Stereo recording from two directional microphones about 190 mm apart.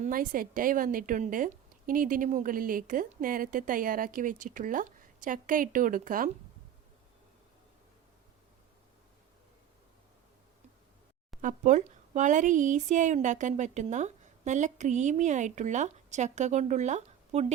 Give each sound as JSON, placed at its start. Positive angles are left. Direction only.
{"t": 0.0, "sound": "speech", "side_deg": -45}
{"t": 11.3, "sound": "speech", "side_deg": -40}